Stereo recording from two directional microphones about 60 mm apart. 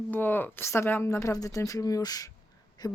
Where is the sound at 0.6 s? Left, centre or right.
Left.